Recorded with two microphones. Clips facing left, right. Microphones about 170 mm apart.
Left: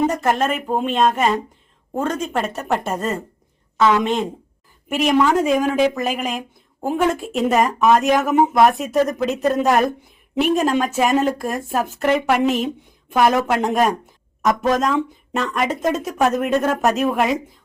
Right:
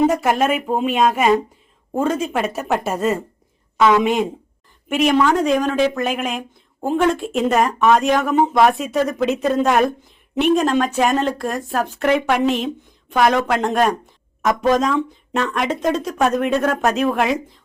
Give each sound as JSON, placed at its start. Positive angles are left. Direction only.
{"t": 0.1, "sound": "speech", "side_deg": -10}